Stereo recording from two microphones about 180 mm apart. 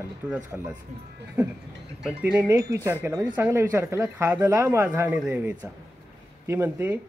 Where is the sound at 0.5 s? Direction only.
5° right (ahead or behind).